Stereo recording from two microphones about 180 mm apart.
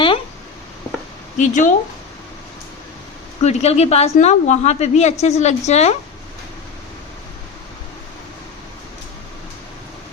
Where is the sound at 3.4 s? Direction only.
35° left (ahead or behind).